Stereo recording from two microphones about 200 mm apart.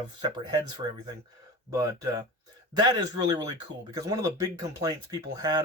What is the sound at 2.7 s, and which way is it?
Speech, 20° right (ahead or behind).